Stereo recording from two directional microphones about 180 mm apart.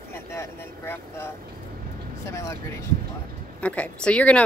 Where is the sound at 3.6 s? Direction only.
5° left (ahead or behind).